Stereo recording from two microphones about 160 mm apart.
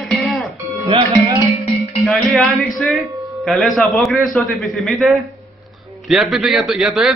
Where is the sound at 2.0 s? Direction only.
Centre (ahead or behind).